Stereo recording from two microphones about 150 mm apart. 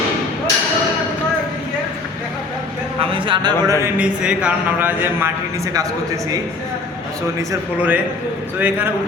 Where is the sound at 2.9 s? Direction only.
35° right (ahead or behind).